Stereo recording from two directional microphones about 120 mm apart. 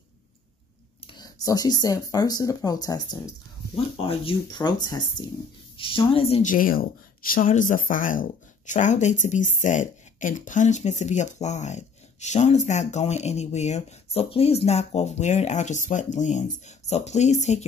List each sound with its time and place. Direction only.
1.0 s speech: 35° left (ahead or behind)
3.7 s speech: 50° left (ahead or behind)
5.8 s a woman's voice: 50° left (ahead or behind)
7.4 s speech: 90° left; by 17.6 s 70° left (ahead or behind)